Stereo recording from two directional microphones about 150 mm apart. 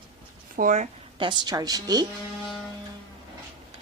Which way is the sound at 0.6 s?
55° right (ahead or behind).